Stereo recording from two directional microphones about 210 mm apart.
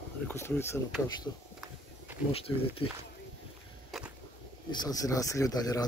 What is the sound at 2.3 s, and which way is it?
Speech, 25° left (ahead or behind).